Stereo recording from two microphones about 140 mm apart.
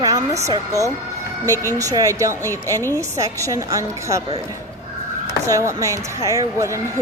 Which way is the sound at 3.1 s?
25° right (ahead or behind).